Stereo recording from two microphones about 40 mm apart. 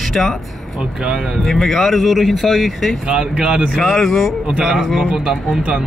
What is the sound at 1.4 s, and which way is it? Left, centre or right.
Speech, centre.